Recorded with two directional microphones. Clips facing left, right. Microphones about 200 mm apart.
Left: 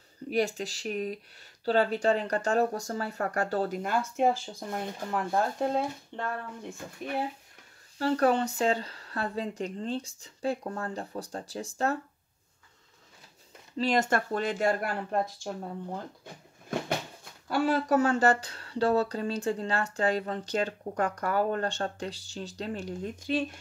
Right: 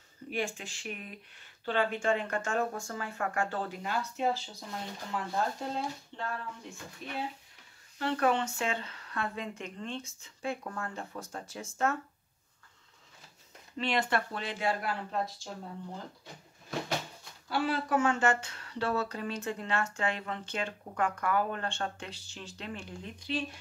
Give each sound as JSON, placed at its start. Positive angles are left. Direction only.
{"t": 0.3, "sound": "speech", "side_deg": 40}
{"t": 8.0, "sound": "speech", "side_deg": 35}
{"t": 13.7, "sound": "speech", "side_deg": 40}
{"t": 17.2, "sound": "speech", "side_deg": 45}